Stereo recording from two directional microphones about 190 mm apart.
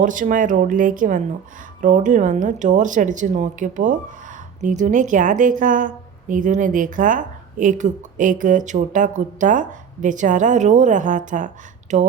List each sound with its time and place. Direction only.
0.0 s a woman's voice: 45° right (ahead or behind)